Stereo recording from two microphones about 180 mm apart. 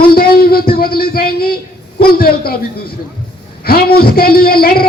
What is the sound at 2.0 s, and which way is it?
A man's voice, 55° left (ahead or behind).